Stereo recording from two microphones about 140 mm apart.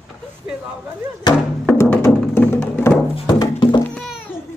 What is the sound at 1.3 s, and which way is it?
Music, 30° left (ahead or behind).